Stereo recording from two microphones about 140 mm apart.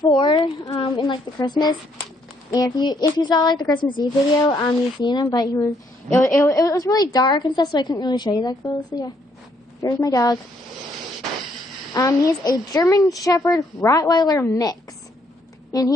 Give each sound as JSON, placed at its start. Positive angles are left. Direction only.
{"t": 0.1, "sound": "a woman's voice", "side_deg": 35}
{"t": 11.9, "sound": "a woman's voice", "side_deg": 25}